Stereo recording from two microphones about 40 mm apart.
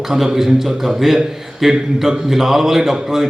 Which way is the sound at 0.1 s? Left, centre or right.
Centre.